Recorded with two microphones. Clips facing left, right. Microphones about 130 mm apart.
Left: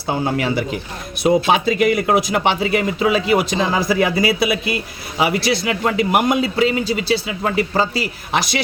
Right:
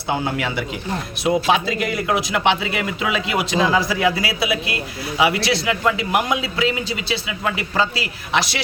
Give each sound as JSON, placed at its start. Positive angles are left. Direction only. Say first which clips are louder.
{"t": 0.3, "sound": "speech", "louder": "left 4 dB", "side_deg": 40}